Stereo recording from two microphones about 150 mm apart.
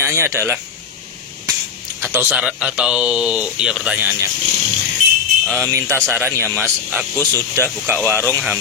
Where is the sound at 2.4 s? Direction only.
5° right (ahead or behind).